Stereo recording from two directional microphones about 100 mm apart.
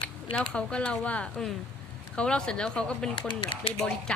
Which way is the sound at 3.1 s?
55° left (ahead or behind).